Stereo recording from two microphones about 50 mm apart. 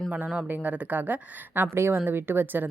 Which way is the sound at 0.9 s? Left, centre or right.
Right.